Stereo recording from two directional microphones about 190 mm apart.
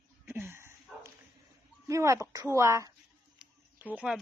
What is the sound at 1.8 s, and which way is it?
Speech, 15° right (ahead or behind).